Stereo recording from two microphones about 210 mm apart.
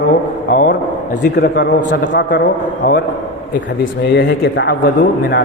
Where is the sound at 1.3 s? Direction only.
55° left (ahead or behind).